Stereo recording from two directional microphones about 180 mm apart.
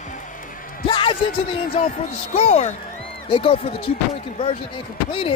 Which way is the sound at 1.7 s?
40° left (ahead or behind).